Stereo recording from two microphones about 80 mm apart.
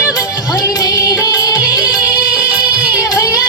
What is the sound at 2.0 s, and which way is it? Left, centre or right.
Music, centre.